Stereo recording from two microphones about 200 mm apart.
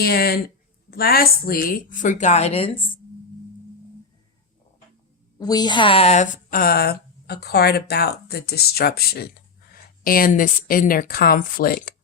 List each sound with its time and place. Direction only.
0.0 s a woman's voice: 50° left (ahead or behind); by 3.0 s 25° left (ahead or behind)
5.4 s a woman's voice: 20° left (ahead or behind); by 11.9 s 50° left (ahead or behind)